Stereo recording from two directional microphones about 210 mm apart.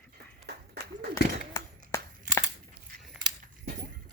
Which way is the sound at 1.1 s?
15° left (ahead or behind).